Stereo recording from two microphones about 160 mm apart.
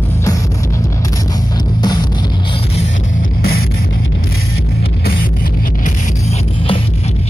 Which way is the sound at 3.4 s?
75° left (ahead or behind).